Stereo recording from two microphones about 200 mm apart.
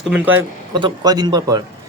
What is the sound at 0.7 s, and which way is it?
Speech, 20° right (ahead or behind).